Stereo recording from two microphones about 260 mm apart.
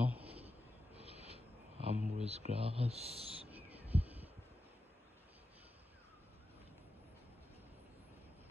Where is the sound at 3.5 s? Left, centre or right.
Centre.